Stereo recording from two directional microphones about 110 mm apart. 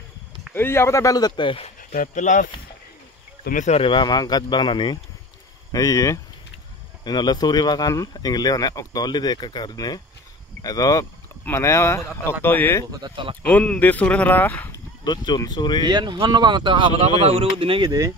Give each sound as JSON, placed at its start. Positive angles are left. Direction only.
{"t": 0.5, "sound": "speech", "side_deg": 20}
{"t": 1.6, "sound": "speech", "side_deg": 90}
{"t": 3.8, "sound": "speech", "side_deg": 45}
{"t": 5.7, "sound": "speech", "side_deg": 30}
{"t": 13.1, "sound": "speech", "side_deg": -50}
{"t": 13.5, "sound": "speech", "side_deg": 15}
{"t": 15.0, "sound": "speech", "side_deg": 40}
{"t": 15.8, "sound": "speech", "side_deg": -40}
{"t": 17.2, "sound": "speech", "side_deg": -60}